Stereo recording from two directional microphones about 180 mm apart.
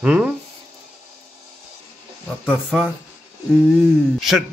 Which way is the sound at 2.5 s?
5° right (ahead or behind).